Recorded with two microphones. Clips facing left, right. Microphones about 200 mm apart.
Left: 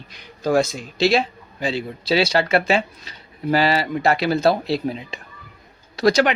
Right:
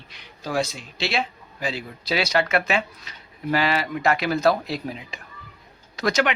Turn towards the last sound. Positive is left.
turn(degrees=35)  # may be behind; listen again after turning